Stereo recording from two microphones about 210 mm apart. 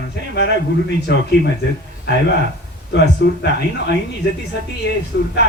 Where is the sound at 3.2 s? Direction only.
55° left (ahead or behind).